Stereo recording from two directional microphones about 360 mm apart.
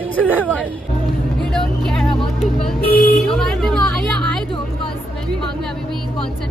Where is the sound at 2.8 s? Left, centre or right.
Left.